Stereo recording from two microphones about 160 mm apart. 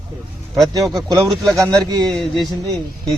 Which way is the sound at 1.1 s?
25° right (ahead or behind).